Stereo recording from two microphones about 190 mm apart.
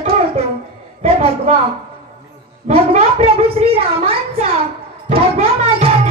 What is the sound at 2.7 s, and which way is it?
A woman's voice, 30° right (ahead or behind).